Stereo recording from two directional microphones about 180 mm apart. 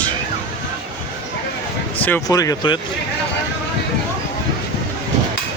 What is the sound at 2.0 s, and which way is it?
Speech, 15° left (ahead or behind).